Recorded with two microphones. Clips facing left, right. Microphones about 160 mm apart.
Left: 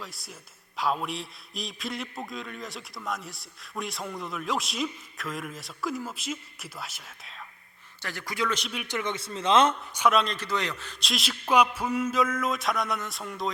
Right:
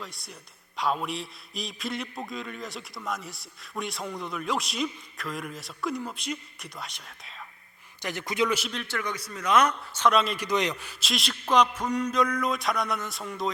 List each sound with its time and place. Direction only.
0.0 s a man's voice: centre (ahead or behind)
8.0 s speech: 20° right (ahead or behind)
8.7 s a man's voice: 15° left (ahead or behind)
10.1 s a man's voice: centre (ahead or behind)
10.3 s a man's voice: 15° right (ahead or behind)
11.0 s a man's voice: centre (ahead or behind)